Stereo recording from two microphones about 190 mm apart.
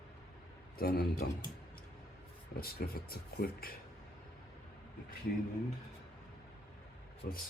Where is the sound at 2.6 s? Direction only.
50° left (ahead or behind).